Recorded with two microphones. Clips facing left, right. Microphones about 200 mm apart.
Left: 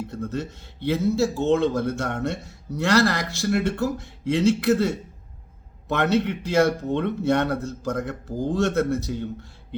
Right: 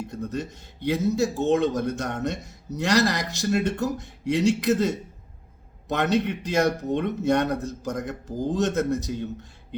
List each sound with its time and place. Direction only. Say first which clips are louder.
0.1 s speech: left 1 dB; 15° right (ahead or behind)